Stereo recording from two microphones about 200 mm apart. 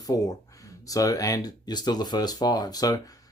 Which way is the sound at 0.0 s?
20° left (ahead or behind).